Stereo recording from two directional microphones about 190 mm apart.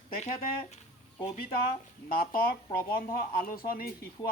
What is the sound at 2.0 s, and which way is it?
Speech, 50° left (ahead or behind).